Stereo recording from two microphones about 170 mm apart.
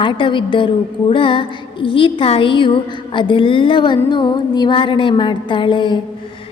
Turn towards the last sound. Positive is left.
turn(degrees=30)  # may be behind; listen again after turning